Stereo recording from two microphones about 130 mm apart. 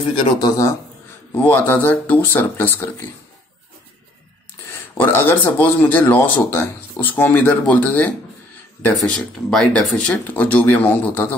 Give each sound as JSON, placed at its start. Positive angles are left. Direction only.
{"t": 0.4, "sound": "speech", "side_deg": 25}
{"t": 1.3, "sound": "speech", "side_deg": 15}
{"t": 4.6, "sound": "speech", "side_deg": 15}